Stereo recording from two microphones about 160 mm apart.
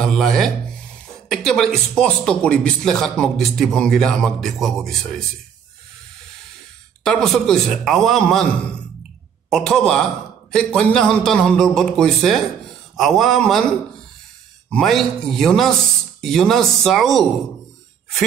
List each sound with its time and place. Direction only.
0.0 s a sound: centre (ahead or behind)
1.3 s a man's voice: centre (ahead or behind)
7.2 s a man's voice: centre (ahead or behind)
14.7 s a man's voice: centre (ahead or behind)